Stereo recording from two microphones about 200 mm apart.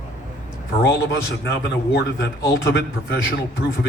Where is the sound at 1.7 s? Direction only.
55° left (ahead or behind).